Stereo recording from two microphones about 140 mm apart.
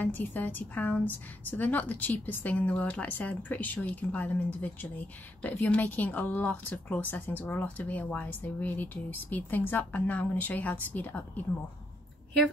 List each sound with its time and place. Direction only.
0.0 s a woman's voice: 15° left (ahead or behind)